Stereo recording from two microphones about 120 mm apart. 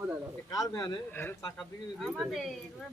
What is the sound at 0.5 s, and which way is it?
Speech, 25° left (ahead or behind).